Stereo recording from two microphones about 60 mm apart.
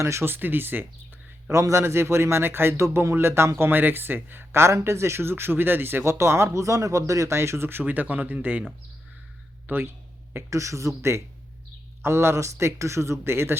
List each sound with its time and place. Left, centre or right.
0.0 s speech: right
0.3 s a man's voice: right
1.5 s a man's voice: right
6.1 s speech: right
9.6 s speech: right
10.5 s speech: right